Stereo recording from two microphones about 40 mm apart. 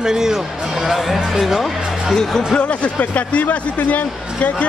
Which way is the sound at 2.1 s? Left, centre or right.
Centre.